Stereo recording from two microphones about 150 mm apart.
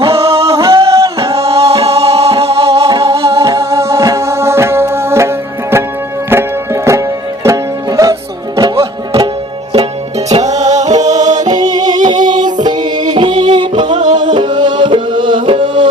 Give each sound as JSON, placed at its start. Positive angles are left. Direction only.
{"t": 0.0, "sound": "music", "side_deg": -40}
{"t": 0.4, "sound": "music", "side_deg": -20}
{"t": 1.2, "sound": "music", "side_deg": -40}
{"t": 3.2, "sound": "music", "side_deg": -20}
{"t": 6.3, "sound": "music", "side_deg": -15}
{"t": 10.2, "sound": "music", "side_deg": -50}
{"t": 11.6, "sound": "music", "side_deg": -25}